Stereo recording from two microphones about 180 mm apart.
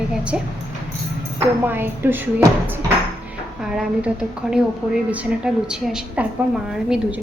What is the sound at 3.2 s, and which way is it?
A woman's voice, 5° right (ahead or behind).